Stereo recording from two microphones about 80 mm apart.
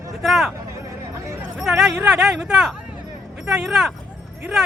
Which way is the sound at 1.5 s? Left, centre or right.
Centre.